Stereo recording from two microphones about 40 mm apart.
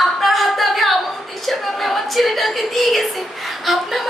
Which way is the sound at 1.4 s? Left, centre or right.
Centre.